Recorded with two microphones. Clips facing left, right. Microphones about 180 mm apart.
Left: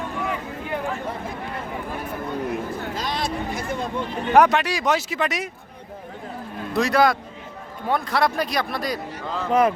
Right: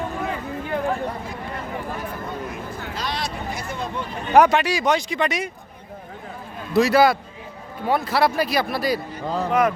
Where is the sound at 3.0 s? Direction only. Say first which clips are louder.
Even; 50° left (ahead or behind).